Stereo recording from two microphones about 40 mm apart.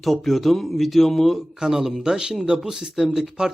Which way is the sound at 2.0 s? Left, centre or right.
Centre.